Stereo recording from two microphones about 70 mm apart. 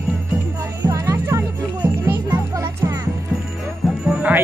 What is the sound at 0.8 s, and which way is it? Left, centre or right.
Music, right.